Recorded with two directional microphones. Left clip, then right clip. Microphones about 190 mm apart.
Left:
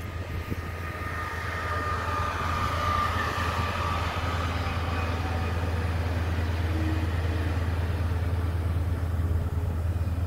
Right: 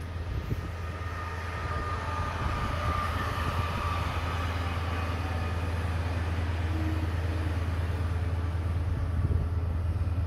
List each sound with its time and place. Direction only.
1.5 s vehicle: 65° left (ahead or behind); by 4.1 s 50° left (ahead or behind)